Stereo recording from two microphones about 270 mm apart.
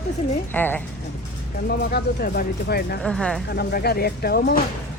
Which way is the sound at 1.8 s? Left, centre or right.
Left.